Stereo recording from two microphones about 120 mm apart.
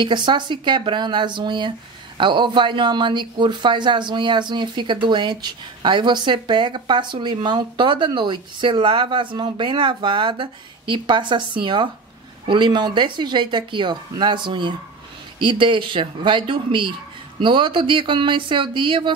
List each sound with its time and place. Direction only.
0.0 s speech: 40° right (ahead or behind)